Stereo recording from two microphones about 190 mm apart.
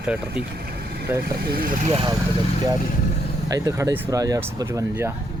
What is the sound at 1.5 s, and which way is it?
Speech, 45° right (ahead or behind).